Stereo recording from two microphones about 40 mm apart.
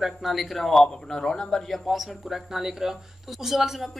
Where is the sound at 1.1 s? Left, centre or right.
Centre.